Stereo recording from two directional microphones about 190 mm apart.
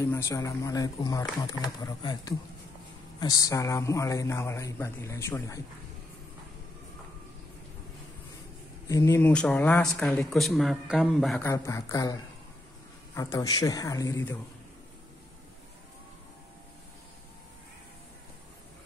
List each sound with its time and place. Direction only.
0.0 s speech: 15° left (ahead or behind)
8.8 s speech: 15° left (ahead or behind); by 11.4 s centre (ahead or behind)
11.4 s speech: 15° left (ahead or behind)